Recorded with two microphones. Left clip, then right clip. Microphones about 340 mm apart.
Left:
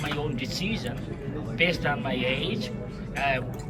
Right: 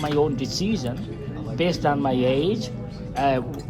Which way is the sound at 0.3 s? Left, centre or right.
Centre.